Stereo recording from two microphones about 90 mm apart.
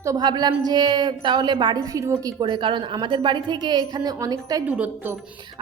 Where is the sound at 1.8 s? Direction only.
40° right (ahead or behind).